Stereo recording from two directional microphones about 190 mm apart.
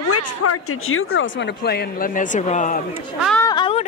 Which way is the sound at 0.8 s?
90° left.